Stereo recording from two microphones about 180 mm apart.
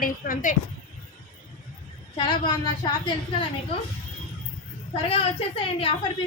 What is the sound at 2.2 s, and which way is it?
A woman's voice, 25° left (ahead or behind).